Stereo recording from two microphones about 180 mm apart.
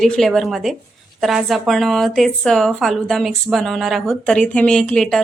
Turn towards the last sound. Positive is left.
turn(degrees=5)  # may be behind; listen again after turning